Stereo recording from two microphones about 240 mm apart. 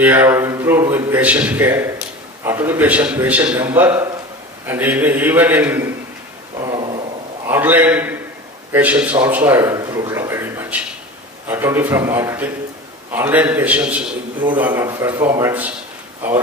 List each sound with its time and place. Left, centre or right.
0.0 s a man's voice: centre
6.6 s a sound: centre
7.4 s a man's voice: centre